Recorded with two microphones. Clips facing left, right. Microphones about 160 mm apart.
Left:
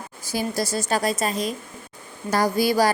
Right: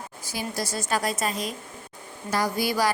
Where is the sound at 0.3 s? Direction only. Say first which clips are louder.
Left 6 dB; 40° left (ahead or behind).